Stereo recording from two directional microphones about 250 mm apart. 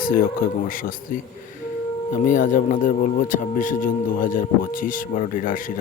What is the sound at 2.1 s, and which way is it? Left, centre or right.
Speech, left.